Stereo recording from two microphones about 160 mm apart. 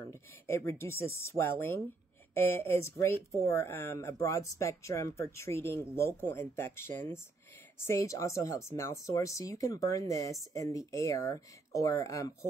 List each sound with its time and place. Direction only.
0.1 s speech: 15° left (ahead or behind)